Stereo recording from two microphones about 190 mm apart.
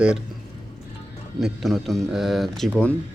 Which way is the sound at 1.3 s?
Centre (ahead or behind).